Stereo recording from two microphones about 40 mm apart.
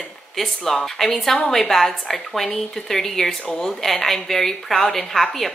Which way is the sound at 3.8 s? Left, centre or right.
Centre.